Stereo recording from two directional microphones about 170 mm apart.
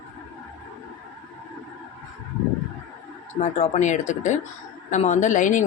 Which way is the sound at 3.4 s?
40° left (ahead or behind).